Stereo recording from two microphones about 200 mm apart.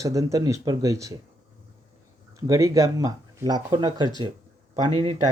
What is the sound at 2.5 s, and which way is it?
A man's voice, 15° right (ahead or behind).